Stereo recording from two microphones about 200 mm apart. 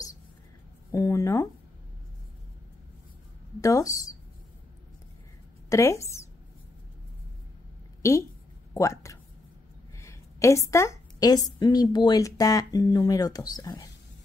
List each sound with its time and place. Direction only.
0.9 s speech: 15° left (ahead or behind)
3.6 s speech: 15° left (ahead or behind)
5.7 s speech: 15° left (ahead or behind)
8.0 s a woman's voice: 15° left (ahead or behind)